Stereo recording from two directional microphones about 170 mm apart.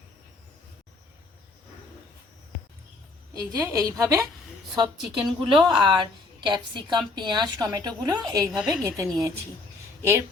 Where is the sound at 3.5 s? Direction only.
20° right (ahead or behind).